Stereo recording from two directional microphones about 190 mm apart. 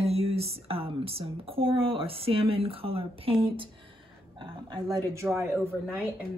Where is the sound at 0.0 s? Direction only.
30° right (ahead or behind).